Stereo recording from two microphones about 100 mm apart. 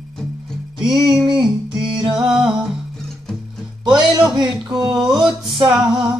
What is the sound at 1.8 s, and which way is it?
Music, 50° right (ahead or behind).